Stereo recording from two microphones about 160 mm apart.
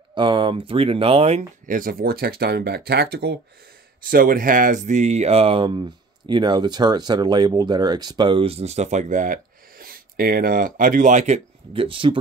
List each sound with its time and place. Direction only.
0.1 s speech: 30° right (ahead or behind)
1.7 s speech: 60° right (ahead or behind); by 3.3 s 90° right
4.0 s speech: 60° right (ahead or behind); by 12.2 s 35° right (ahead or behind)